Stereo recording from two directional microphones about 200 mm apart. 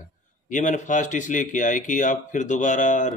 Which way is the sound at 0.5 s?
40° left (ahead or behind).